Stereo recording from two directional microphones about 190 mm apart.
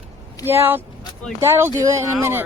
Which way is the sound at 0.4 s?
10° right (ahead or behind).